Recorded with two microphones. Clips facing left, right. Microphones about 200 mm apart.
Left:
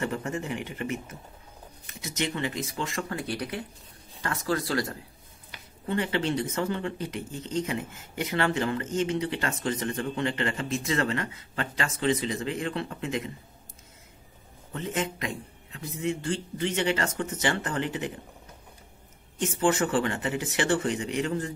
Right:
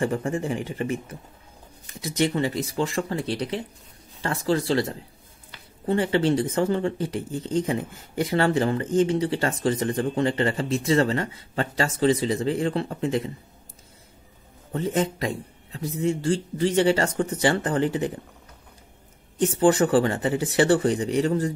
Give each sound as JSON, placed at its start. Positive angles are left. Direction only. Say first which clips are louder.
{"t": 0.0, "sound": "speech", "louder": "right 6 dB", "side_deg": -30}
{"t": 14.7, "sound": "speech", "louder": "right 6 dB", "side_deg": -35}
{"t": 19.4, "sound": "speech", "louder": "right 6 dB", "side_deg": -35}